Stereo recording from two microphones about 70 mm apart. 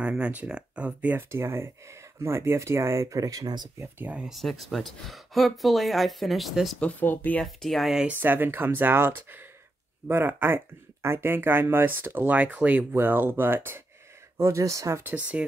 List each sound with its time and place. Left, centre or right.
0.0 s speech: centre
1.1 s speech: right
4.0 s speech: right
4.3 s speech: centre
6.8 s speech: left
7.4 s speech: centre
8.1 s speech: right
14.3 s speech: right
15.0 s speech: right